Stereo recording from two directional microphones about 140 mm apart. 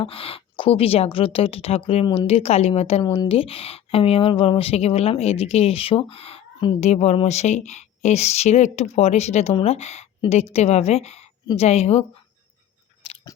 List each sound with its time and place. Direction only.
0.0 s speech: 40° left (ahead or behind)
3.0 s speech: 30° left (ahead or behind)
3.2 s speech: 40° left (ahead or behind)
6.7 s speech: 50° left (ahead or behind)
13.0 s chewing: 40° left (ahead or behind)